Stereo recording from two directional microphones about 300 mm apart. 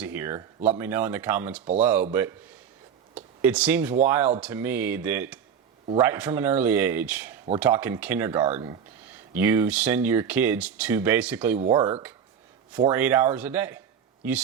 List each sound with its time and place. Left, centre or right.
0.0 s speech: centre
3.2 s speech: centre
11.6 s speech: centre
12.7 s speech: centre